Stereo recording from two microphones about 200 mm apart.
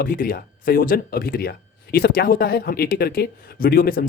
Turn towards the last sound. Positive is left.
turn(degrees=45)  # may be behind; listen again after turning